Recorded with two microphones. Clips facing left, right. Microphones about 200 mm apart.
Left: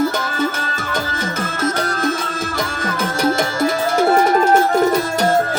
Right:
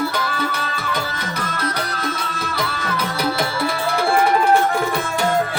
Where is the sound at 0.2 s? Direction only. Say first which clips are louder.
Left 3 dB; 45° left (ahead or behind).